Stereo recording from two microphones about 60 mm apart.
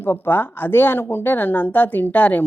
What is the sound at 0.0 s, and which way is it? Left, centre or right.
Speech, left.